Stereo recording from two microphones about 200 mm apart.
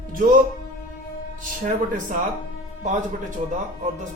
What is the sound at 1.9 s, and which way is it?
Speech, 40° right (ahead or behind).